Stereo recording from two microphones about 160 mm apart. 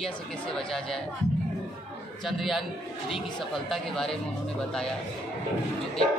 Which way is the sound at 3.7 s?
Centre (ahead or behind).